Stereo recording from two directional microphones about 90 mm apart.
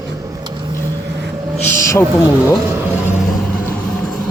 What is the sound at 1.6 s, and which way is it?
Speech, 30° left (ahead or behind).